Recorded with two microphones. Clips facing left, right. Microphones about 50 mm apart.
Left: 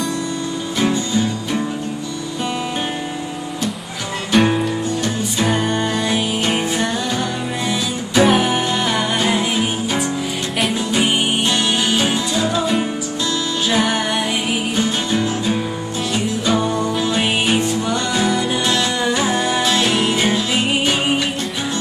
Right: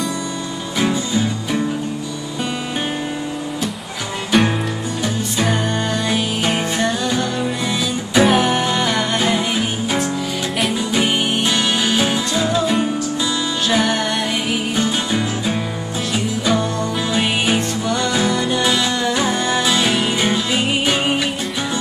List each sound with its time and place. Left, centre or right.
0.7 s music: centre
4.3 s music: centre
17.1 s music: centre